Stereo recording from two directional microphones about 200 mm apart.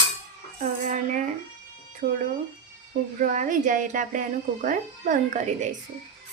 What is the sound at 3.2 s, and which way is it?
Speech, 40° right (ahead or behind).